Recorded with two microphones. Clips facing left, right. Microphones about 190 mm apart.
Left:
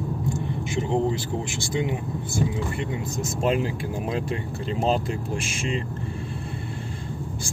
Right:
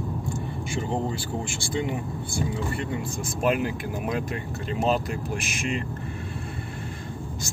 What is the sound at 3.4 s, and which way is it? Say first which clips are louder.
Speech: even; 25° left (ahead or behind).